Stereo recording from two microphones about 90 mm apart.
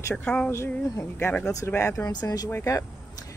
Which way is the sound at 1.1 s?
25° left (ahead or behind).